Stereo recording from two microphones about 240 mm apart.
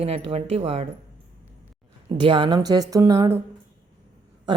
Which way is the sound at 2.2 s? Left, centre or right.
Centre.